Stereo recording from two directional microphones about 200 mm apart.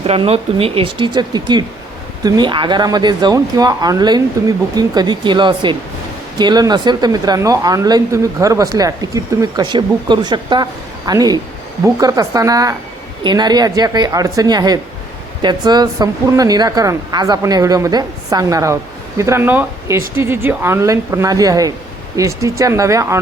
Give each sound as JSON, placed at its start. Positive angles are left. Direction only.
{"t": 0.0, "sound": "a woman's voice", "side_deg": -30}